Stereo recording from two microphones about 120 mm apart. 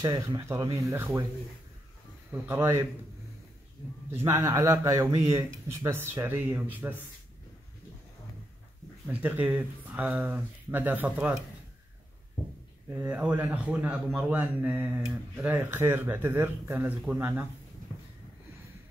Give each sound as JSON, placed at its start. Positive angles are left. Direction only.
{"t": 0.0, "sound": "speech", "side_deg": -35}
{"t": 2.4, "sound": "speech", "side_deg": -25}
{"t": 4.1, "sound": "speech", "side_deg": -20}
{"t": 9.0, "sound": "speech", "side_deg": -15}
{"t": 12.9, "sound": "speech", "side_deg": -20}